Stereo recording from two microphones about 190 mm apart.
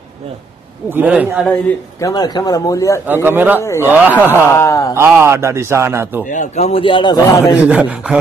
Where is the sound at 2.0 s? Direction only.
20° left (ahead or behind).